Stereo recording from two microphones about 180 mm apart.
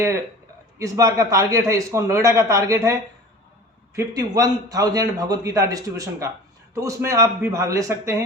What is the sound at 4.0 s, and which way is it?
A man's voice, 20° right (ahead or behind).